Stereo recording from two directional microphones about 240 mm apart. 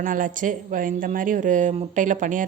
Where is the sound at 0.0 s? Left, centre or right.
Right.